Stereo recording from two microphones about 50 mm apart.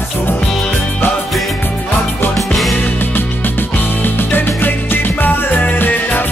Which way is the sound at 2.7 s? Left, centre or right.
Left.